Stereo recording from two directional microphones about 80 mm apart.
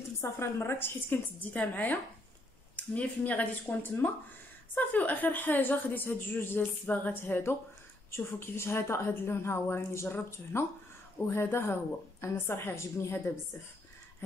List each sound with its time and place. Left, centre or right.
0.2 s a woman's voice: left
1.5 s a woman's voice: centre